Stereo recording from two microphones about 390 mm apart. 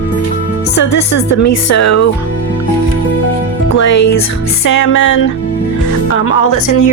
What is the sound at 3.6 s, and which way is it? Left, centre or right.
Music, left.